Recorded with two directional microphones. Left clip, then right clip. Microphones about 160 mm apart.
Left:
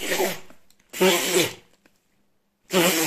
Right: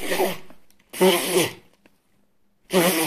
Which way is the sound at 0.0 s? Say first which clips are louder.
Right 1 dB; 20° left (ahead or behind).